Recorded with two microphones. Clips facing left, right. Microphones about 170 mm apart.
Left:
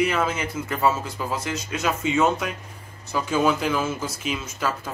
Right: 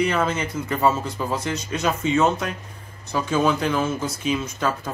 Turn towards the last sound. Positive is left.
turn(degrees=5)  # may be behind; listen again after turning